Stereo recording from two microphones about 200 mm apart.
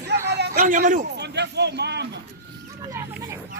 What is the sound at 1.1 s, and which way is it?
Speech, 60° right (ahead or behind).